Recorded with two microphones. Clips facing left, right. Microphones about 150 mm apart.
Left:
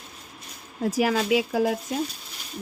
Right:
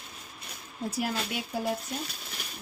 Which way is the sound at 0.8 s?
90° left.